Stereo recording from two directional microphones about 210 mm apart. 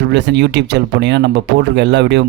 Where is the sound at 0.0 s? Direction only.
55° right (ahead or behind).